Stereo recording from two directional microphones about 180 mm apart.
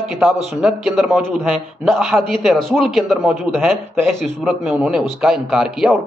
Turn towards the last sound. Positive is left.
turn(degrees=0)  # may be behind; listen again after turning